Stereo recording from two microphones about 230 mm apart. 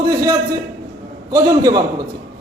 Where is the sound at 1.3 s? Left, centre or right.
Centre.